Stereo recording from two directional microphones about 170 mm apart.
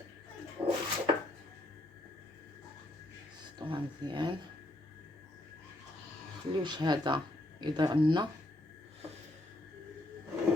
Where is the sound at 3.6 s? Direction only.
30° right (ahead or behind).